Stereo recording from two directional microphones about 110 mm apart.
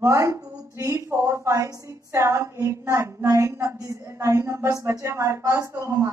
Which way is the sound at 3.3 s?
30° right (ahead or behind).